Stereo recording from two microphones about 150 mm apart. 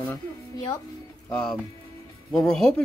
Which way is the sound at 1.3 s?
10° left (ahead or behind).